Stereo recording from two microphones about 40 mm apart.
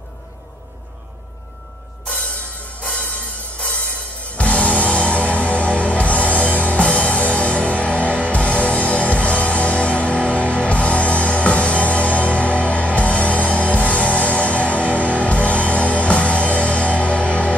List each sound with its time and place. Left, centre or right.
2.8 s music: left
4.4 s music: left
8.3 s music: left